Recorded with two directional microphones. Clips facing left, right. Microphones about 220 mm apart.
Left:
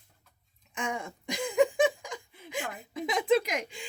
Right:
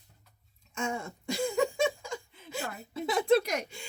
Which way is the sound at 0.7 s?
15° left (ahead or behind).